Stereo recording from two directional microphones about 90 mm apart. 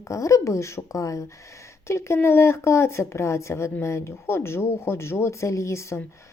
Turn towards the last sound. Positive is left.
turn(degrees=30)  # may be behind; listen again after turning